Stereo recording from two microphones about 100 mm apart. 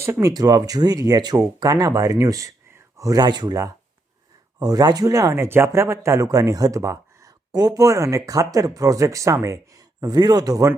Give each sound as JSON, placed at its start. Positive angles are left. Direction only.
{"t": 0.0, "sound": "speech", "side_deg": -30}